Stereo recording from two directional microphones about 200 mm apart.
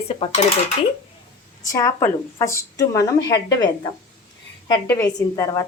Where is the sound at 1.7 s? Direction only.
15° left (ahead or behind).